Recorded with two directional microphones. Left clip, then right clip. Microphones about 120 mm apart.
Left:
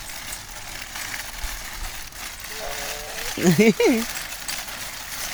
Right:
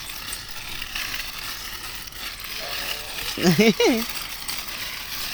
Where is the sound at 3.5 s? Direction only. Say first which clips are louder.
Left 1 dB; 45° left (ahead or behind).